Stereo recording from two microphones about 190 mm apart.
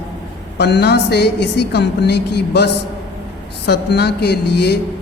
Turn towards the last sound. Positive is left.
turn(degrees=60)  # may be behind; listen again after turning